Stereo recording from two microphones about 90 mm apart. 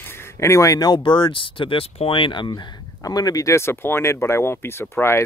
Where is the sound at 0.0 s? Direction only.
25° left (ahead or behind).